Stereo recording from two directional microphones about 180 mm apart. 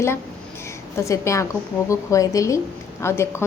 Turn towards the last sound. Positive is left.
turn(degrees=15)  # may be behind; listen again after turning